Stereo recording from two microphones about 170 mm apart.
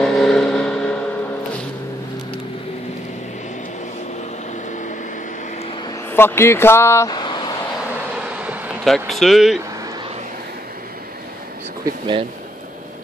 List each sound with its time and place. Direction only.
0.0 s vehicle: centre (ahead or behind)
5.9 s vehicle: 15° left (ahead or behind)
8.4 s vehicle: 10° right (ahead or behind)
8.8 s speech: centre (ahead or behind)
11.8 s a sound: 30° right (ahead or behind)